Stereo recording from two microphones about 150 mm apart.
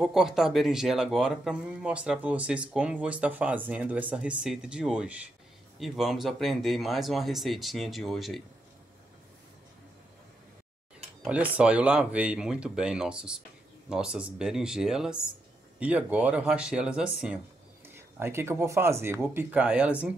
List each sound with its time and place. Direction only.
0.0 s speech: 5° right (ahead or behind)
11.2 s speech: 10° right (ahead or behind)